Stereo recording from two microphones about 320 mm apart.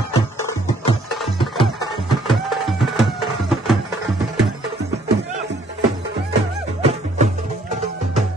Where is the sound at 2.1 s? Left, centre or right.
Centre.